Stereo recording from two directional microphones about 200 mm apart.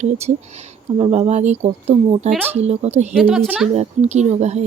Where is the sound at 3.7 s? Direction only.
35° right (ahead or behind).